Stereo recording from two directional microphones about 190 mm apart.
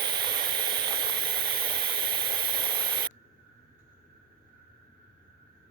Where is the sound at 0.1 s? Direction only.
25° right (ahead or behind).